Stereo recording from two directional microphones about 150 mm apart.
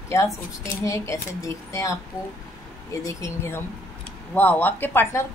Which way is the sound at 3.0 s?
20° left (ahead or behind).